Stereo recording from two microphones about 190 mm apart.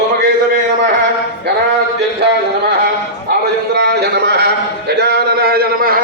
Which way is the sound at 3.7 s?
65° right (ahead or behind).